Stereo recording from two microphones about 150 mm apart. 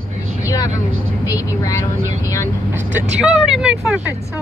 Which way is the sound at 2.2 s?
20° left (ahead or behind).